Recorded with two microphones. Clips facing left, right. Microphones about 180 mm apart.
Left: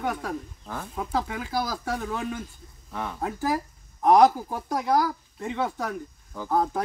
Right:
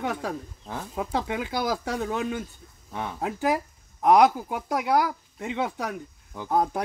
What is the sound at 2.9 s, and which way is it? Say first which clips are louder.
Speech: even; 20° right (ahead or behind).